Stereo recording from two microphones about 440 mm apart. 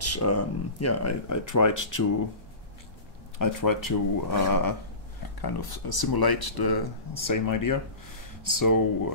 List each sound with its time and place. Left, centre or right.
0.0 s speech: left
3.3 s speech: left